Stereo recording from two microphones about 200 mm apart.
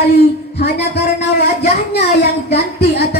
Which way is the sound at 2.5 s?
55° left (ahead or behind).